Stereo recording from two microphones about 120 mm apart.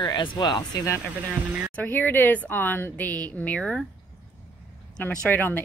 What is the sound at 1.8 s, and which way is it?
A woman's voice, 15° left (ahead or behind).